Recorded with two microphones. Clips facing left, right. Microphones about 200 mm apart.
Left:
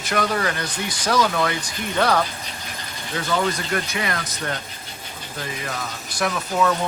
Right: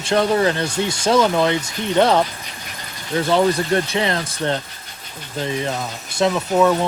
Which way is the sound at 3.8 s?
25° right (ahead or behind).